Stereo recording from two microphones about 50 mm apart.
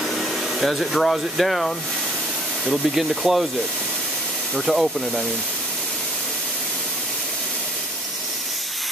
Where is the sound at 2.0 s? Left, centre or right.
Centre.